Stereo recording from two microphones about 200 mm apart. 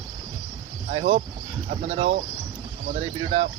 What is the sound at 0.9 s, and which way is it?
Speech, 35° right (ahead or behind).